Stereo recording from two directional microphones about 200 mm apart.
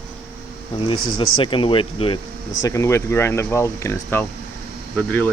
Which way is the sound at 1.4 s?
25° left (ahead or behind).